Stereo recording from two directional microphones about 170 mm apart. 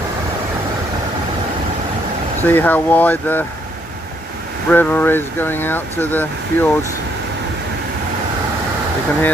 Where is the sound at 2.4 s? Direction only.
10° left (ahead or behind).